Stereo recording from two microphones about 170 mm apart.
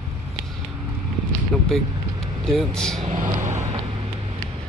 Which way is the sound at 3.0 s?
45° right (ahead or behind).